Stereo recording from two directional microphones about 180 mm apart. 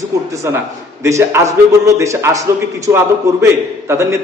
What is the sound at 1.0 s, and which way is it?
A man's voice, 15° right (ahead or behind).